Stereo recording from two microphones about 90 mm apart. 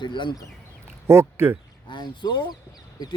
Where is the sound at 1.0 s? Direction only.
30° right (ahead or behind).